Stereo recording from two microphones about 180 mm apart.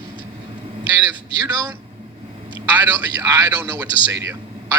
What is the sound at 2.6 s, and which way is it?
A man's voice, 10° right (ahead or behind).